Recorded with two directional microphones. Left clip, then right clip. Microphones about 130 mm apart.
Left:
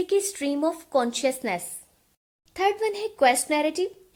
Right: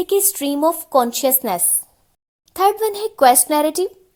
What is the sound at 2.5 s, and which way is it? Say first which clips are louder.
A child's voice: right 7 dB; 55° right (ahead or behind).